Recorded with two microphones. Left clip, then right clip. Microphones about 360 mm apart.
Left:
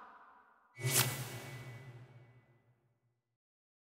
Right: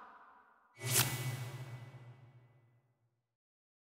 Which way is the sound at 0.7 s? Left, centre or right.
Centre.